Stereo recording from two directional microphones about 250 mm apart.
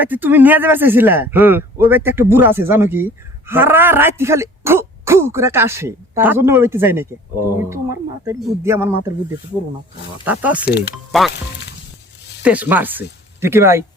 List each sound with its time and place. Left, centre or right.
0.0 s speech: centre
10.2 s speech: centre
10.7 s speech: left
10.9 s speech: centre
12.4 s speech: centre